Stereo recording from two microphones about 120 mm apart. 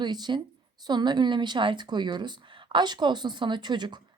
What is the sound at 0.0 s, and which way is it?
A woman's voice, 40° right (ahead or behind).